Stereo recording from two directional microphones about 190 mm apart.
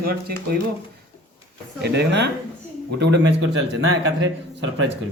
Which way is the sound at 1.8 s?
65° right (ahead or behind).